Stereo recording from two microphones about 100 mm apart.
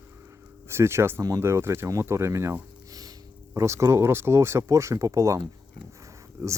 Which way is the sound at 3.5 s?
30° right (ahead or behind).